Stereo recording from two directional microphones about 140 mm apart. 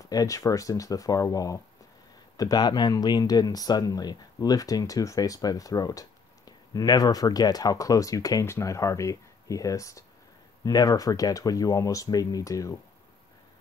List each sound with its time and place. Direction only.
0.1 s speech: 25° left (ahead or behind)